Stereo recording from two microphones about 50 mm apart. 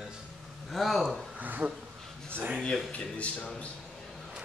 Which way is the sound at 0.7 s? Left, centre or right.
Centre.